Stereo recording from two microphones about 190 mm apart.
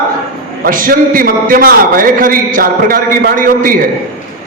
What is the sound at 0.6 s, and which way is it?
A man's voice, 45° right (ahead or behind).